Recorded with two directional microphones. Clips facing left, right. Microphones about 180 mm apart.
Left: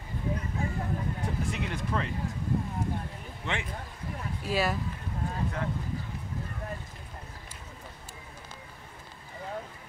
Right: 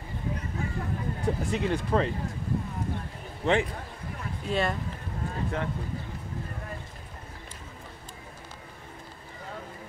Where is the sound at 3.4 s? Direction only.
40° right (ahead or behind).